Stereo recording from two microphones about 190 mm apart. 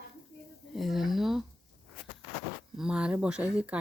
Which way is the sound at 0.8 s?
Centre (ahead or behind).